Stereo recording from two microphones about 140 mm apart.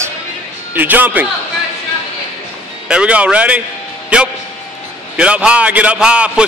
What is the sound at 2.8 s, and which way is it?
A man's voice, 10° right (ahead or behind).